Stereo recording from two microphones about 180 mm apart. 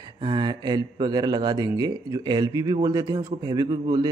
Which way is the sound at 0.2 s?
25° right (ahead or behind).